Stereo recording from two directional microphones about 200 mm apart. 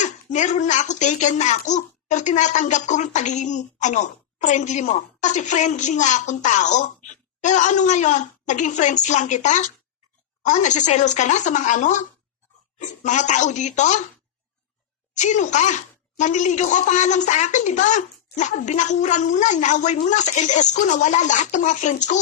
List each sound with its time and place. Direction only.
0.0 s a child's voice: 35° left (ahead or behind)
15.1 s a child's voice: 35° left (ahead or behind)